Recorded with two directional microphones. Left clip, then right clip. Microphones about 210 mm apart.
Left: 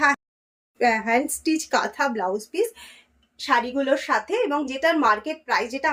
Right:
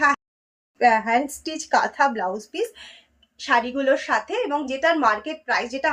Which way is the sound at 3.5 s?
20° left (ahead or behind).